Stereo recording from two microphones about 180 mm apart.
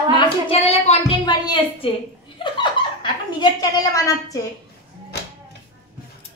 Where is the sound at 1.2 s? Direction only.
25° left (ahead or behind).